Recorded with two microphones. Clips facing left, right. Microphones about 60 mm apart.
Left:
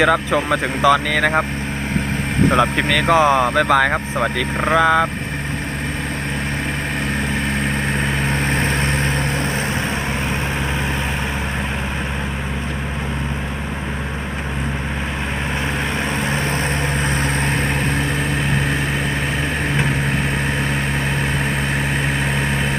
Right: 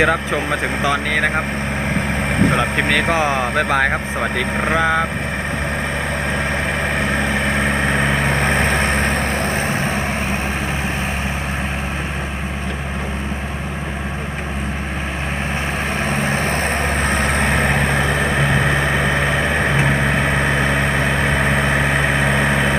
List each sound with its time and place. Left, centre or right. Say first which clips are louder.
0.0 s speech: left 1 dB; centre
2.7 s speech: left 1 dB; right
3.2 s speech: left 4 dB; centre
3.5 s speech: left 2 dB; right
4.6 s speech: left 3 dB; centre
7.6 s vehicle: right 3 dB; right
8.8 s vehicle: right 2 dB; right
9.3 s vehicle: right 2 dB; right
16.0 s vehicle: right 2 dB; right
16.5 s vehicle: right 2 dB; right
17.2 s vehicle: right 3 dB; right
21.3 s vehicle: right 4 dB; right